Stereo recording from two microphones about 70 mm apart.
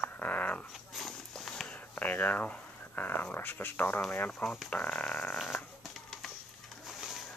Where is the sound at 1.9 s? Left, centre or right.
Left.